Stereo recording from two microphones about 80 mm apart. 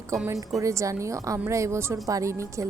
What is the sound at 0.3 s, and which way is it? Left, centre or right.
A woman's voice, right.